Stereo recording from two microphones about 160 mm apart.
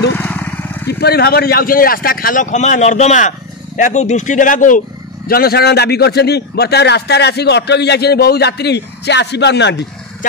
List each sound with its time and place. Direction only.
0.2 s vehicle: 10° left (ahead or behind)
0.8 s speech: 85° left; by 4.8 s 55° left (ahead or behind)
5.3 s a man's voice: 70° left (ahead or behind); by 9.8 s 90° left